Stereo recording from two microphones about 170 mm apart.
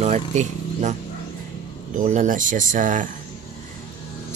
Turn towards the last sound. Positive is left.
turn(degrees=-50)  # may be behind; listen again after turning